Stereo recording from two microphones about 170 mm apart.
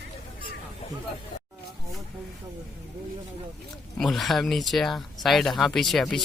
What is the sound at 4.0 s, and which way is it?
Speech, centre (ahead or behind).